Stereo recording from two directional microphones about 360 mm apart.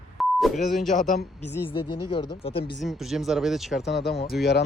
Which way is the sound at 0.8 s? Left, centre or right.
Left.